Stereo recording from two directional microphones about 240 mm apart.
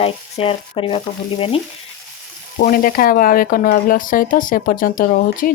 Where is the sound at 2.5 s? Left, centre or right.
Left.